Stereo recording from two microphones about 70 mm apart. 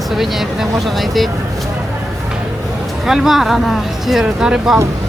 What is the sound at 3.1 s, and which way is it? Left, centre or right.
Speech, centre.